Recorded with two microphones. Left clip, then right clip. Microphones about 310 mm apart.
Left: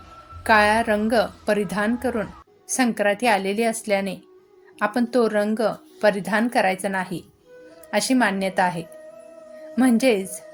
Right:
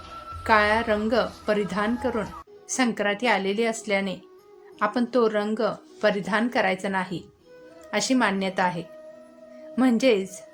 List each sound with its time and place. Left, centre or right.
0.4 s a woman's voice: centre